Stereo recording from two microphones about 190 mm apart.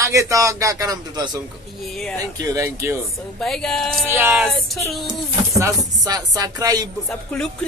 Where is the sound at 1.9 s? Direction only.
5° left (ahead or behind).